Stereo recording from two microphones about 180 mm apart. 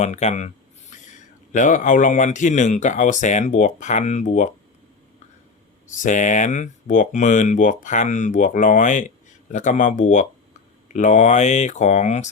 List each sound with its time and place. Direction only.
0.0 s speech: 40° left (ahead or behind)
5.9 s speech: 45° left (ahead or behind)